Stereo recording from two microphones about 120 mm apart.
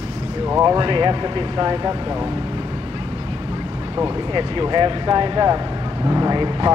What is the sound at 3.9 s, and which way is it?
Speech, 35° right (ahead or behind).